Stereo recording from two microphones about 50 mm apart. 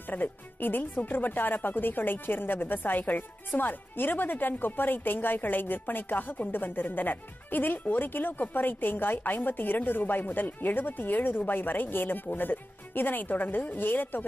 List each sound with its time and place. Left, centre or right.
0.1 s speech: left